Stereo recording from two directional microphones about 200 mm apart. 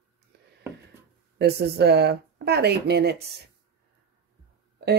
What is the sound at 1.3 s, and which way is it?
Speech, 55° right (ahead or behind).